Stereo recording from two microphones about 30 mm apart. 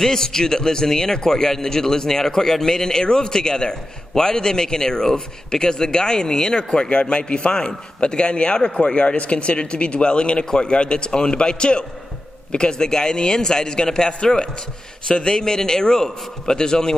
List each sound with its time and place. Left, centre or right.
0.0 s speech: centre
6.9 s speech: left